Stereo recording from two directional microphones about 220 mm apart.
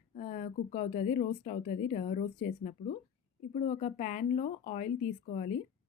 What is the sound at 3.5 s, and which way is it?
Speech, 30° left (ahead or behind).